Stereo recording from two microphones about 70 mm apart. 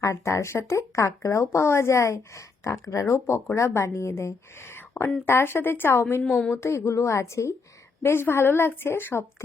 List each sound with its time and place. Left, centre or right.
0.0 s a woman's voice: left
6.3 s speech: centre
6.6 s a woman's voice: left